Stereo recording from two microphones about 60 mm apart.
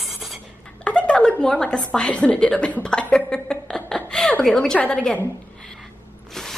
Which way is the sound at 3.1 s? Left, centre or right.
Centre.